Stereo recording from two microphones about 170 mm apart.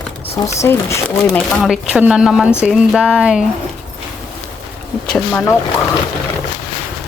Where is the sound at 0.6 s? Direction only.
15° left (ahead or behind).